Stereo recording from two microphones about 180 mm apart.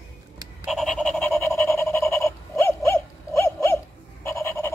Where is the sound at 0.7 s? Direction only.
Centre (ahead or behind).